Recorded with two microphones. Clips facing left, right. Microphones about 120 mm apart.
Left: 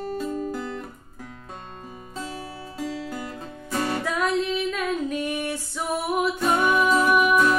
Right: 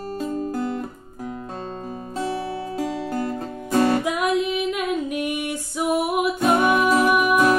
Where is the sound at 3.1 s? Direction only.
50° right (ahead or behind).